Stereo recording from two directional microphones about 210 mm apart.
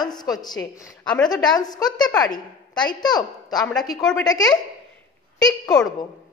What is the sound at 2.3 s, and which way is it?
A woman's voice, 20° left (ahead or behind).